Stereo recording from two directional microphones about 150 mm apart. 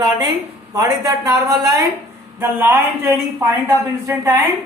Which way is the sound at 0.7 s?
20° right (ahead or behind).